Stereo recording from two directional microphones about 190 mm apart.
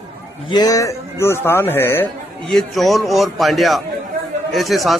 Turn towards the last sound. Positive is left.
turn(degrees=0)  # may be behind; listen again after turning